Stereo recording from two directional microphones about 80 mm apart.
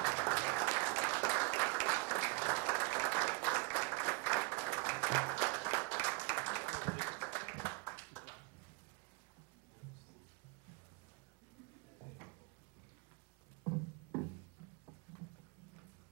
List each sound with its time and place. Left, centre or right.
0.0 s applause: left